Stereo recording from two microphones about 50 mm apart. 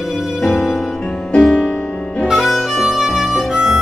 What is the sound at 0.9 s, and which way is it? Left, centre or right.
Music, centre.